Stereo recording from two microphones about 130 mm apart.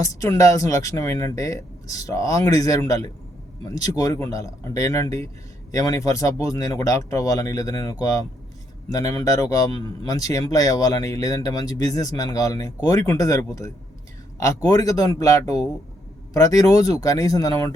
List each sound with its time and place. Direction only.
0.0 s speech: 25° left (ahead or behind)